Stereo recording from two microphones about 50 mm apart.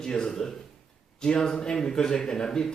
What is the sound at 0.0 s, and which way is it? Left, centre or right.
Speech, centre.